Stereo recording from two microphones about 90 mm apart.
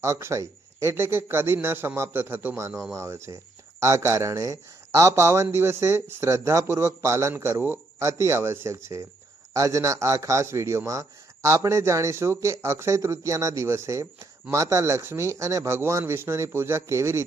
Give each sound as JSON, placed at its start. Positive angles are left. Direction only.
{"t": 0.0, "sound": "speech", "side_deg": -30}